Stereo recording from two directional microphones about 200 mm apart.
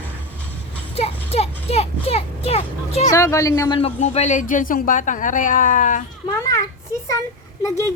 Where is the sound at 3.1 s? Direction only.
15° left (ahead or behind).